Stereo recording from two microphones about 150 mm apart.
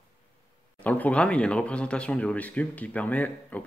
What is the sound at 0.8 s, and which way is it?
Speech, 10° left (ahead or behind).